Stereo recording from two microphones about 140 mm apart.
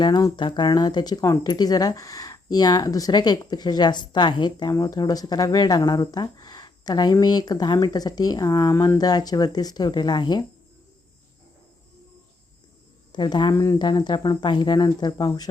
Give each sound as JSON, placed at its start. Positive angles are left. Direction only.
{"t": 0.0, "sound": "speech", "side_deg": 25}
{"t": 13.1, "sound": "speech", "side_deg": 30}